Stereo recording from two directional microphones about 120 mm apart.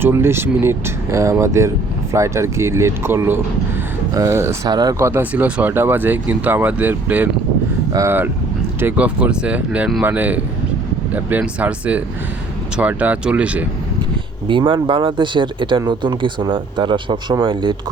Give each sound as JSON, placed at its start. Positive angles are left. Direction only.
{"t": 0.0, "sound": "speech", "side_deg": -20}
{"t": 4.7, "sound": "speech", "side_deg": -35}
{"t": 4.9, "sound": "speech", "side_deg": -20}
{"t": 14.4, "sound": "speech", "side_deg": -45}